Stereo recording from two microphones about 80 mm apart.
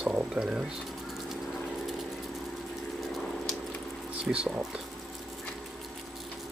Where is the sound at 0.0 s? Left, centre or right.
Centre.